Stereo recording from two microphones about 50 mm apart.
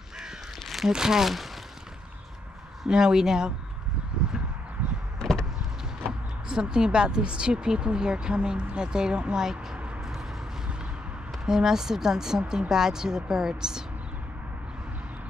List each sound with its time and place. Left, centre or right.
0.7 s a sound: centre
0.9 s speech: centre
2.9 s speech: centre
5.2 s vehicle: centre
6.5 s speech: centre
11.4 s speech: centre